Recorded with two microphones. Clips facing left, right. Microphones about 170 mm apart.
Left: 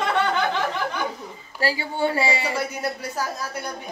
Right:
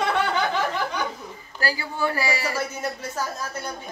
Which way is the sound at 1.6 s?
25° left (ahead or behind).